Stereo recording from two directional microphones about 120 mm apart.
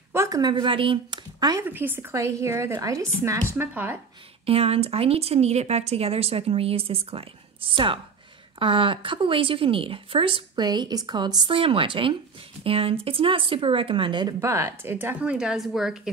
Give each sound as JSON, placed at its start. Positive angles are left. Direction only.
{"t": 0.1, "sound": "a sound", "side_deg": -25}
{"t": 0.4, "sound": "speech", "side_deg": -40}
{"t": 1.4, "sound": "speech", "side_deg": -30}
{"t": 1.7, "sound": "speech", "side_deg": -15}
{"t": 4.5, "sound": "a woman's voice", "side_deg": -55}
{"t": 14.4, "sound": "a woman's voice", "side_deg": -25}